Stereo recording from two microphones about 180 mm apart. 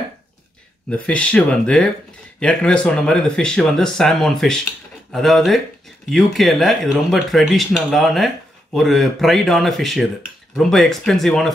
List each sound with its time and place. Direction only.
0.8 s speech: 5° left (ahead or behind)